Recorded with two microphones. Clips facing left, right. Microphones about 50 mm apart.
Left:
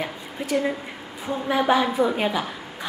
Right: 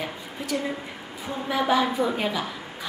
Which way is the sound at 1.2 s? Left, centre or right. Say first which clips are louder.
Left 4 dB; centre.